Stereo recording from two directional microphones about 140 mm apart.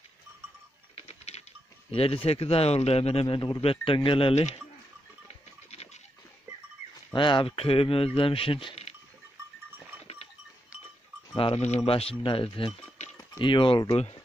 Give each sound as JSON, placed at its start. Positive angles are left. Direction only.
{"t": 0.9, "sound": "typing", "side_deg": 50}
{"t": 1.9, "sound": "speech", "side_deg": 40}
{"t": 5.3, "sound": "a sound", "side_deg": 50}
{"t": 7.2, "sound": "speech", "side_deg": 35}
{"t": 11.3, "sound": "speech", "side_deg": 45}